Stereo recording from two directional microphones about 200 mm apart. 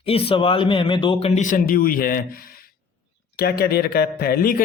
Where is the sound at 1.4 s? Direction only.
40° left (ahead or behind).